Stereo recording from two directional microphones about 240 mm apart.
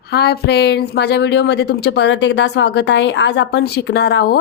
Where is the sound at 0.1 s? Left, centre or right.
Left.